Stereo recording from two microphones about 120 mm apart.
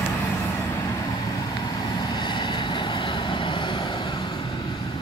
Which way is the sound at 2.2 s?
40° left (ahead or behind).